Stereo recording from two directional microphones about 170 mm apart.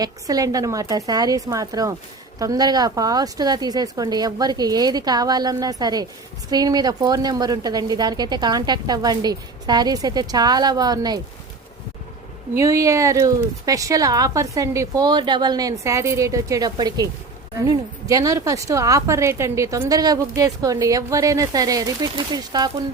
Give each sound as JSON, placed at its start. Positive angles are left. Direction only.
{"t": 0.0, "sound": "a woman's voice", "side_deg": -20}
{"t": 12.5, "sound": "a woman's voice", "side_deg": -20}
{"t": 18.1, "sound": "a woman's voice", "side_deg": -20}